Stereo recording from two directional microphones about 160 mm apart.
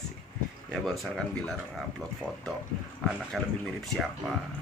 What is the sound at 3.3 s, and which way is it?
Speech, centre (ahead or behind).